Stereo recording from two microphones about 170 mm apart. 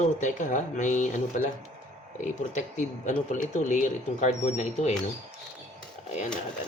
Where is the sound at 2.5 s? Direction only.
45° left (ahead or behind).